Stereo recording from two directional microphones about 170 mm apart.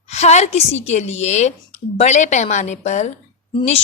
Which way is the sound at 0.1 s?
40° left (ahead or behind).